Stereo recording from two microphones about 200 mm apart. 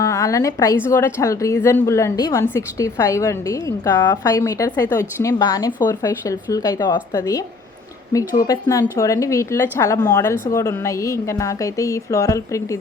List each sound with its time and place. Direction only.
0.0 s a woman's voice: 15° left (ahead or behind)
8.4 s a woman's voice: 15° left (ahead or behind)